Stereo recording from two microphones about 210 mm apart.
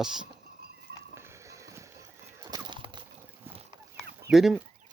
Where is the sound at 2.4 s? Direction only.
20° right (ahead or behind).